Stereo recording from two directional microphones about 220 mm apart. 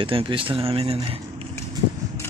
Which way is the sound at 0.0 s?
25° right (ahead or behind).